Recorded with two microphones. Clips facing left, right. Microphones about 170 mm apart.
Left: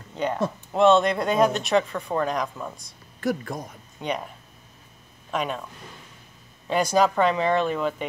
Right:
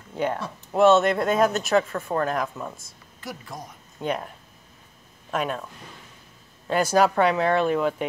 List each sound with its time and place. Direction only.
0.7 s speech: 5° right (ahead or behind)
3.2 s speech: 55° left (ahead or behind)
4.0 s speech: 5° right (ahead or behind)
5.3 s speech: 5° right (ahead or behind)
6.7 s speech: 5° right (ahead or behind)